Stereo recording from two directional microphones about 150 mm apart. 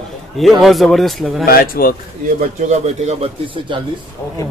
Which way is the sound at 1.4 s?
75° left (ahead or behind).